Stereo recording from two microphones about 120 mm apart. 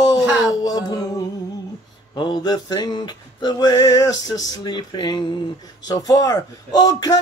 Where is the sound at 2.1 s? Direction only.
40° left (ahead or behind).